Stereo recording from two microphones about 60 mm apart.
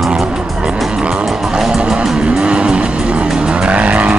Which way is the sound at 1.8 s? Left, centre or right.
Centre.